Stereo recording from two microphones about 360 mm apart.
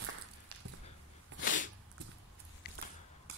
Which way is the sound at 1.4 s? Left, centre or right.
Left.